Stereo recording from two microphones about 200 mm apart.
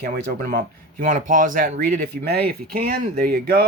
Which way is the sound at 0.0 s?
50° right (ahead or behind).